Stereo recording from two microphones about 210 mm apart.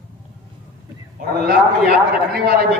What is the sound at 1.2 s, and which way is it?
A man's voice, 45° right (ahead or behind).